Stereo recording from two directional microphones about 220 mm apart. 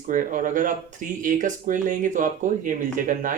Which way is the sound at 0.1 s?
35° right (ahead or behind).